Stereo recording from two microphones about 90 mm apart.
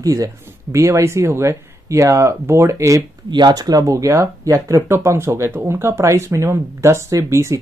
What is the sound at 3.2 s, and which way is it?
Speech, 55° right (ahead or behind).